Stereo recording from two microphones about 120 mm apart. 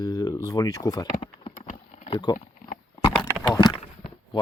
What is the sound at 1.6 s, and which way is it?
Typing, 80° left.